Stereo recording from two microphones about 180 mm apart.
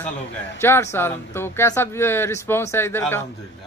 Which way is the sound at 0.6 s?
15° left (ahead or behind).